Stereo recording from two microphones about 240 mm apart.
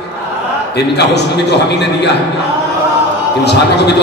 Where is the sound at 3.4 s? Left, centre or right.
Left.